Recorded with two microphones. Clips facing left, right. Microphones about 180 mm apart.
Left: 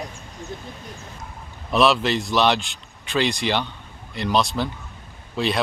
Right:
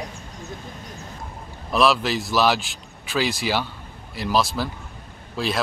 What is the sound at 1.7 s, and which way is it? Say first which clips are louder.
A man's voice: left 1 dB; centre (ahead or behind).